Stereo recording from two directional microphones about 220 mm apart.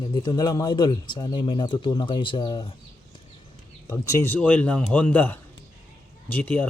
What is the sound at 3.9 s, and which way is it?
A man's voice, 15° left (ahead or behind).